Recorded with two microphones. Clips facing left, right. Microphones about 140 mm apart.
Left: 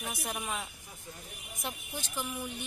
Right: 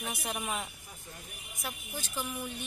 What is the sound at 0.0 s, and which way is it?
Speech, centre (ahead or behind).